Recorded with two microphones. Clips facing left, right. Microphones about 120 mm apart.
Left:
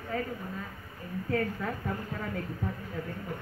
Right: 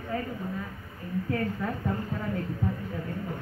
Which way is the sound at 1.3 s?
10° right (ahead or behind).